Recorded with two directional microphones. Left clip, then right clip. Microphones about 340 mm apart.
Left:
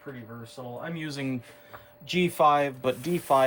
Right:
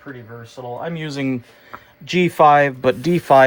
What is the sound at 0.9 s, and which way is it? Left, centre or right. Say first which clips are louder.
Speech: right 9 dB; centre.